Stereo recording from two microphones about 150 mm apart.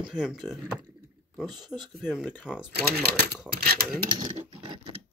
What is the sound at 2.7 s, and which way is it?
Speech, 90° right.